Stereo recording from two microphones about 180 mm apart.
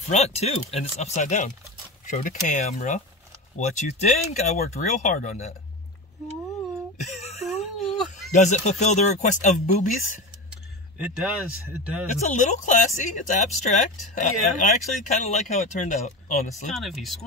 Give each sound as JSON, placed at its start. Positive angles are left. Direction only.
{"t": 0.1, "sound": "speech", "side_deg": 40}
{"t": 7.0, "sound": "a sound", "side_deg": 40}
{"t": 8.3, "sound": "speech", "side_deg": 40}
{"t": 11.1, "sound": "speech", "side_deg": -5}
{"t": 12.1, "sound": "speech", "side_deg": 45}
{"t": 16.7, "sound": "speech", "side_deg": 0}